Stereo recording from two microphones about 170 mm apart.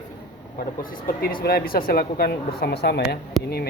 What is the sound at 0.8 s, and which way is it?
A woman's voice, 55° left (ahead or behind).